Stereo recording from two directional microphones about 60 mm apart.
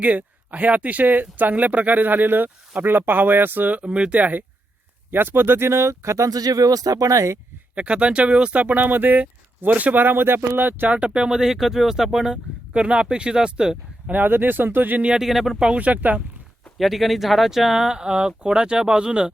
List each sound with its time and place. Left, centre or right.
0.0 s speech: right
3.8 s speech: centre; by 7.3 s right
7.8 s speech: centre
10.9 s speech: right
14.1 s speech: right
15.0 s speech: centre
15.8 s speech: right
16.7 s speech: centre